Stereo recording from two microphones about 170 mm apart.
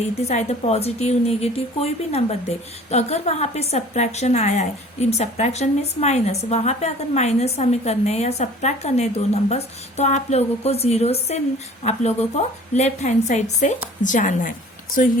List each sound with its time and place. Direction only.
0.0 s a woman's voice: 40° left (ahead or behind)